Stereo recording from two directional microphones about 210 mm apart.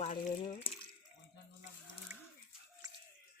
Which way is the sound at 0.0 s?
35° left (ahead or behind).